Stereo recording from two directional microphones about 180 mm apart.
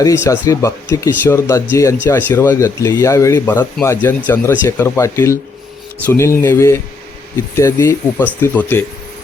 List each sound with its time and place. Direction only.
0.0 s speech: 15° left (ahead or behind)